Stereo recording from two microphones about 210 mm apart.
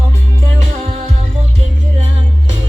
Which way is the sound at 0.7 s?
30° right (ahead or behind).